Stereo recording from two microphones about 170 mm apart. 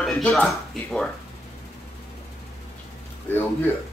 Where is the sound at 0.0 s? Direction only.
Centre (ahead or behind).